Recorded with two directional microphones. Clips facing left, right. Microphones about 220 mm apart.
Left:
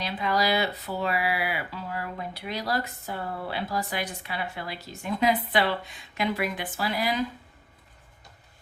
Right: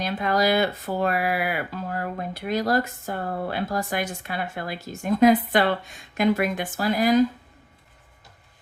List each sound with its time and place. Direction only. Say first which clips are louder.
0.0 s speech: right 4 dB; 50° right (ahead or behind)